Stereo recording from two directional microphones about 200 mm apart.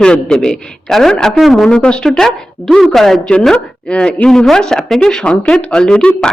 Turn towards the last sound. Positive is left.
turn(degrees=5)  # may be behind; listen again after turning